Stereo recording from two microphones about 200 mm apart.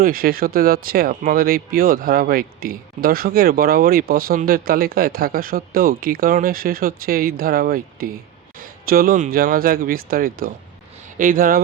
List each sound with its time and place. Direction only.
0.0 s speech: 45° right (ahead or behind)